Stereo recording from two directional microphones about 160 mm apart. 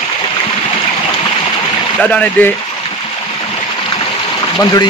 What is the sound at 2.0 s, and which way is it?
Speech, 10° left (ahead or behind).